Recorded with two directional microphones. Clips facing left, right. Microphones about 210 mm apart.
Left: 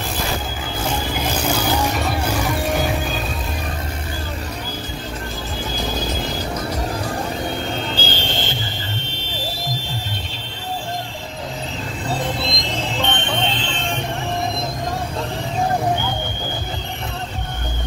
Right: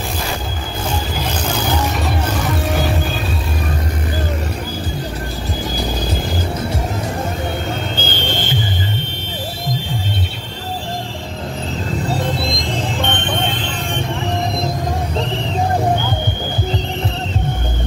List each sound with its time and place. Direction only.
7.9 s music: 55° right (ahead or behind)
13.0 s music: 55° right (ahead or behind)